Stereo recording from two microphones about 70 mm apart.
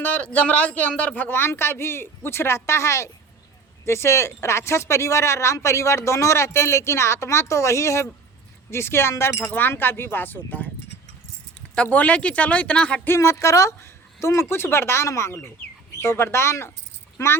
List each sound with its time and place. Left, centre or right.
0.0 s speech: left
11.7 s speech: centre
13.1 s speech: left